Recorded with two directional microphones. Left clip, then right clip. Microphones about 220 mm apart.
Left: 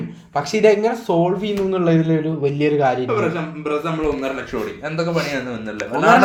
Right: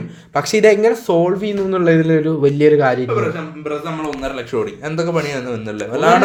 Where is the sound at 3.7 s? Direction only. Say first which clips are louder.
Left 1 dB; 5° left (ahead or behind).